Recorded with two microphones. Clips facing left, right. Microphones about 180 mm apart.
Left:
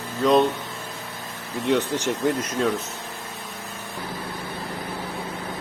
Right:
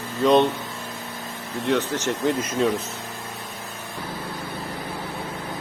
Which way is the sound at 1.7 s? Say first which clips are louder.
Left 1 dB; 15° left (ahead or behind).